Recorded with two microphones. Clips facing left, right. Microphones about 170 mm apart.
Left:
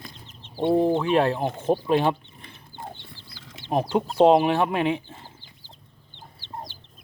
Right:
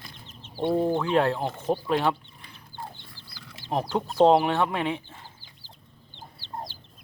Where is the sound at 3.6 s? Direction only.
20° left (ahead or behind).